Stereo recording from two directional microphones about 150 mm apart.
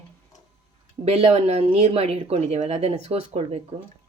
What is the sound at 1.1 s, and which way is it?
Speech, 45° right (ahead or behind).